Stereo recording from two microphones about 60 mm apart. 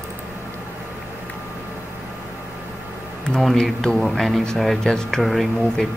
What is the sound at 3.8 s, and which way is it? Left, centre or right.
Speech, centre.